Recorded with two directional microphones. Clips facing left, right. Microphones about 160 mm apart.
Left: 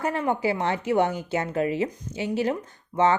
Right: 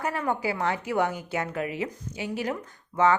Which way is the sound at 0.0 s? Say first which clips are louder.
Left 3 dB; 25° left (ahead or behind).